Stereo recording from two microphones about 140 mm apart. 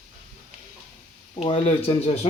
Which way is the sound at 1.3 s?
45° left (ahead or behind).